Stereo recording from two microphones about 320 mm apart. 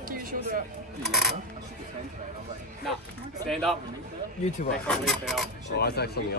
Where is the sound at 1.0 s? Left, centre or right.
Centre.